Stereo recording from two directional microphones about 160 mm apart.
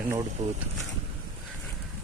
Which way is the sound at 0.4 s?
45° right (ahead or behind).